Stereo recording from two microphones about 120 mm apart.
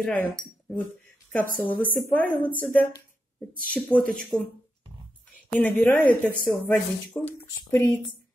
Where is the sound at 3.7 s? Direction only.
10° left (ahead or behind).